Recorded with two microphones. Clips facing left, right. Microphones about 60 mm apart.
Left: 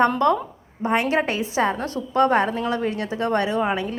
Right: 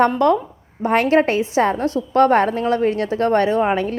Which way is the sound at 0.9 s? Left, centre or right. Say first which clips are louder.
Right 6 dB; right.